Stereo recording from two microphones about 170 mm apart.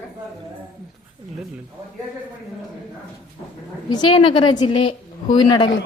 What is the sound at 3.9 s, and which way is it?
A woman's voice, 30° left (ahead or behind).